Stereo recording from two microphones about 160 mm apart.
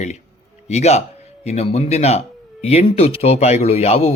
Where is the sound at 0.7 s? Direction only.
45° left (ahead or behind).